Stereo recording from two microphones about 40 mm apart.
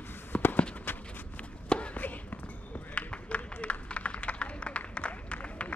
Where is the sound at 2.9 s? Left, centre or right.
Left.